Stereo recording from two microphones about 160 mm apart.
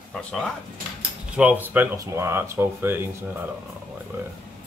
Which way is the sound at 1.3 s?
10° right (ahead or behind).